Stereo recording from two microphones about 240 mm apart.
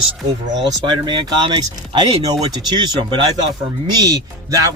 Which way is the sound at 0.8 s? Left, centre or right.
Centre.